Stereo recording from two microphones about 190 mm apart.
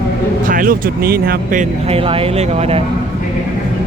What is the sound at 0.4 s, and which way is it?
Speech, 45° right (ahead or behind).